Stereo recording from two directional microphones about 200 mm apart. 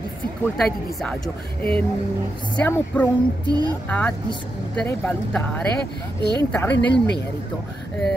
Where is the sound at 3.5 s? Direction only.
20° right (ahead or behind).